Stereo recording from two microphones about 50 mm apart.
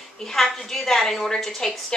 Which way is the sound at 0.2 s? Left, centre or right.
Centre.